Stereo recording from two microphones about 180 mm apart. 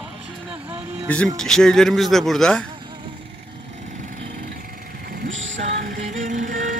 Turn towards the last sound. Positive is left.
turn(degrees=-45)  # may be behind; listen again after turning